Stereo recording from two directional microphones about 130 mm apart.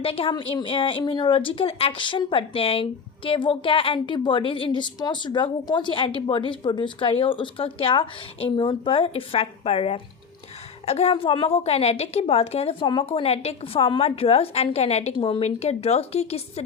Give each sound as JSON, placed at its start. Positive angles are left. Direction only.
{"t": 0.0, "sound": "a woman's voice", "side_deg": 45}
{"t": 15.1, "sound": "a woman's voice", "side_deg": 45}